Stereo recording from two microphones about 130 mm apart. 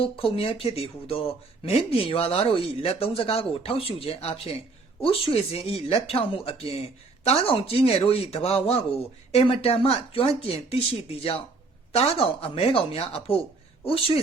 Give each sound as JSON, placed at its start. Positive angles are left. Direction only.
{"t": 0.0, "sound": "speech", "side_deg": 45}